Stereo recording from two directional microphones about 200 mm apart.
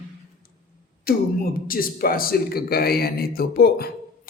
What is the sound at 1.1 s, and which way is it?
A man's voice, 50° left (ahead or behind).